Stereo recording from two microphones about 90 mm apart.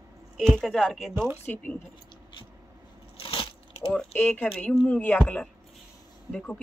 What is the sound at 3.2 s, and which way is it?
Biting, 90° left.